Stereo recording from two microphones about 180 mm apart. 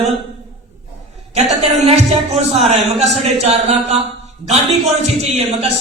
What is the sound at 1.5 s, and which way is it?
Speech, 35° right (ahead or behind).